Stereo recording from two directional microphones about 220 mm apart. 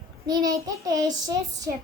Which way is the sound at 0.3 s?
15° right (ahead or behind).